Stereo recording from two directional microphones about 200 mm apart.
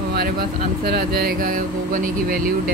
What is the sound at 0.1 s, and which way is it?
Speech, 50° right (ahead or behind).